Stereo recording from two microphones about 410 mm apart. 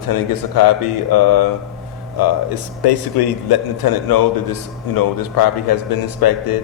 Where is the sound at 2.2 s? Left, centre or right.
Left.